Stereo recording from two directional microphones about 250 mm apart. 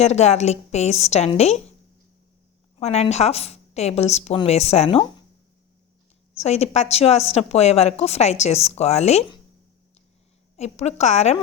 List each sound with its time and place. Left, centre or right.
0.0 s a woman's voice: left
2.7 s a woman's voice: left
6.3 s a woman's voice: left
10.6 s a woman's voice: left